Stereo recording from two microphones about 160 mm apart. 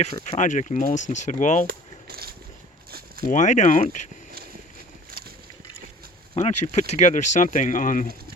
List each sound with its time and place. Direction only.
0.3 s speech: 50° left (ahead or behind)
1.6 s a sound: 75° right (ahead or behind)
3.2 s speech: 50° left (ahead or behind)
6.3 s speech: 45° left (ahead or behind)